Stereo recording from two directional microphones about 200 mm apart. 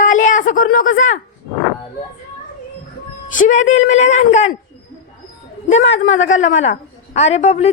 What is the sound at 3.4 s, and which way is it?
A woman's voice, 40° left (ahead or behind).